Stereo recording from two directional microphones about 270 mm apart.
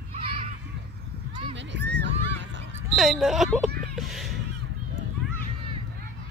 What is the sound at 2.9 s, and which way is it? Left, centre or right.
Speech, centre.